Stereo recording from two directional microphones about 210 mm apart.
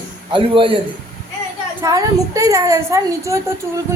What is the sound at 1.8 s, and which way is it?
A man's voice, 15° right (ahead or behind).